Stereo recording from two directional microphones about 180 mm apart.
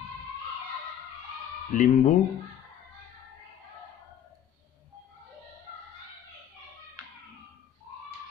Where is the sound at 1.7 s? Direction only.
45° left (ahead or behind).